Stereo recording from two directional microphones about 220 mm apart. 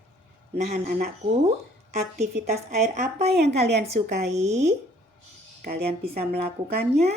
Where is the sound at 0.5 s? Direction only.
35° right (ahead or behind).